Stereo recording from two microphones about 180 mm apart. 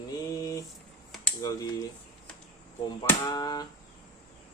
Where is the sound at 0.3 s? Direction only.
20° left (ahead or behind).